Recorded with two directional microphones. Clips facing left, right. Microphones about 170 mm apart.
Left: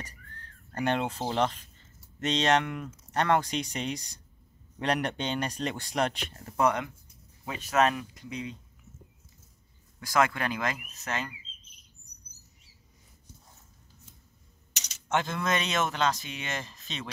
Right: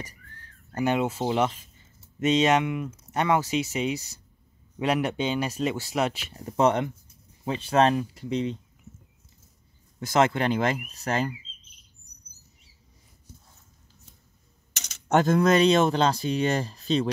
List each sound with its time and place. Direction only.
0.7 s speech: 10° right (ahead or behind)
6.4 s speech: 25° right (ahead or behind)
9.9 s speech: 25° right (ahead or behind)
14.7 s speech: 50° right (ahead or behind); by 17.1 s 35° right (ahead or behind)